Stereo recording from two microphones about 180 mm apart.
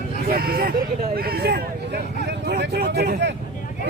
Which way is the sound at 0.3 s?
55° right (ahead or behind).